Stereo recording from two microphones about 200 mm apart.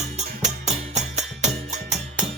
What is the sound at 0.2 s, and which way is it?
Music, 35° right (ahead or behind).